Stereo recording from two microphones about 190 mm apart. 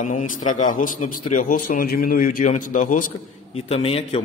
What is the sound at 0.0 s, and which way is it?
A man's voice, 40° left (ahead or behind).